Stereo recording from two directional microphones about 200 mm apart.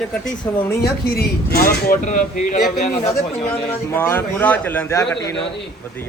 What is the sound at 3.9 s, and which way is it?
A man's voice, 10° left (ahead or behind).